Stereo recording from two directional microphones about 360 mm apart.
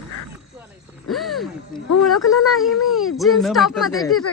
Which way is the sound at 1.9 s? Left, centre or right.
Left.